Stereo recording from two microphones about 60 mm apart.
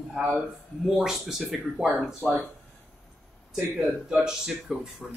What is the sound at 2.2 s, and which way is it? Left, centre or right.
Speech, centre.